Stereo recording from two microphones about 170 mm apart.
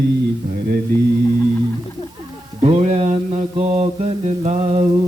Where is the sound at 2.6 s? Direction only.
35° right (ahead or behind).